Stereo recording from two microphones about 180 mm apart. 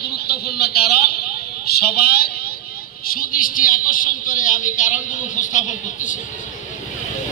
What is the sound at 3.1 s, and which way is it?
A woman's voice, 50° left (ahead or behind).